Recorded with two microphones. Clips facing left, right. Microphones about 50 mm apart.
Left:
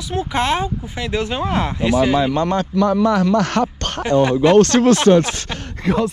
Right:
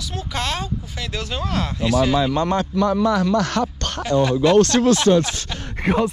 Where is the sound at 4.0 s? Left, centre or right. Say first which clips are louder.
Left 3 dB; left.